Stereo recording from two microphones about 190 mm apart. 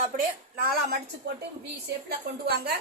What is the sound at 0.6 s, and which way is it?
Speech, 50° right (ahead or behind).